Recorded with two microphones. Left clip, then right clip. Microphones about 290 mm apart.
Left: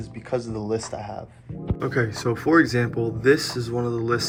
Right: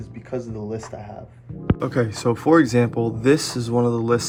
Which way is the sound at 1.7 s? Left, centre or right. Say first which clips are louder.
Left 1 dB; centre.